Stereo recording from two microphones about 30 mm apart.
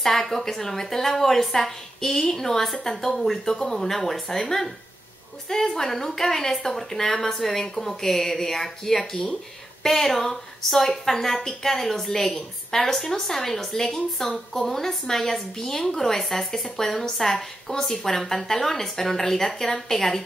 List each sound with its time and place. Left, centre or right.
0.0 s a woman's voice: centre